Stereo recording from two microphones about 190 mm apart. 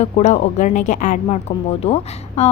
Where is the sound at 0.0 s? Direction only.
40° left (ahead or behind).